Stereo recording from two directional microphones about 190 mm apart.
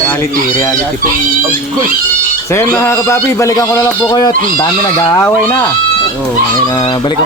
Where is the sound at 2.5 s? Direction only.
15° left (ahead or behind).